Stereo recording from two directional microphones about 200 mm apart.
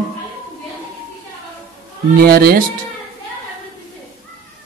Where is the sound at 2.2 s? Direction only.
50° right (ahead or behind).